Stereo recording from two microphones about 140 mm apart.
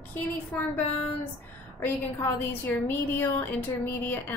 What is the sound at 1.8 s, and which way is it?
A woman's voice, 15° left (ahead or behind).